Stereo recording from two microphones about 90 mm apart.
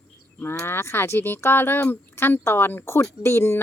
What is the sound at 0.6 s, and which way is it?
Speech, 25° left (ahead or behind).